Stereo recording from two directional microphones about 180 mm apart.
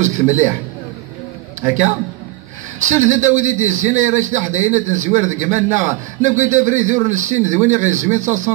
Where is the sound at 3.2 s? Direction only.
40° right (ahead or behind).